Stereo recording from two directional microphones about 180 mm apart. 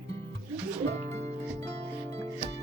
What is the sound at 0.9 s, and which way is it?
Music, 40° right (ahead or behind).